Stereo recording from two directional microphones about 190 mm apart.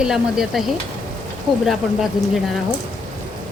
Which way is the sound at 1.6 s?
Centre (ahead or behind).